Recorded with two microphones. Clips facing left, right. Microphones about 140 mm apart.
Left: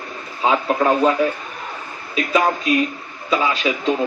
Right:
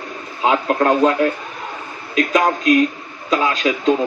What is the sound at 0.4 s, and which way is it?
Speech, 5° left (ahead or behind).